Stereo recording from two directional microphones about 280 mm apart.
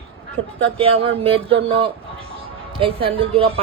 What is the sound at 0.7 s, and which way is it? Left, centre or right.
A woman's voice, centre.